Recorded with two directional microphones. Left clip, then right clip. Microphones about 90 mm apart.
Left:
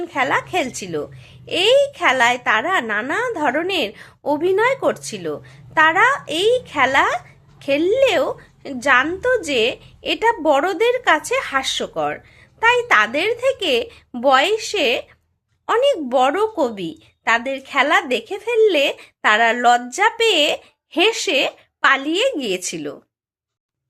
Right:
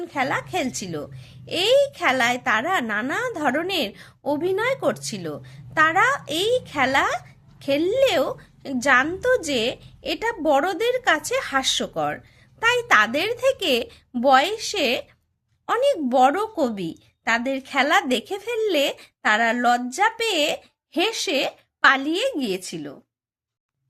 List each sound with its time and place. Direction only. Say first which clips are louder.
0.0 s speech: left 5 dB; 30° right (ahead or behind)
22.6 s a woman's voice: left 7 dB; centre (ahead or behind)